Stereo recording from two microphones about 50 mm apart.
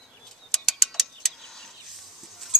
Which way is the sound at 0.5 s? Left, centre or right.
Centre.